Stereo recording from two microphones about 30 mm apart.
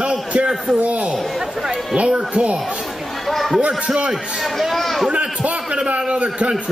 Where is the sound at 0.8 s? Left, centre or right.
Right.